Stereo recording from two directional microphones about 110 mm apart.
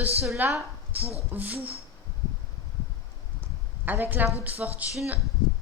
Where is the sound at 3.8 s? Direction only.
20° right (ahead or behind).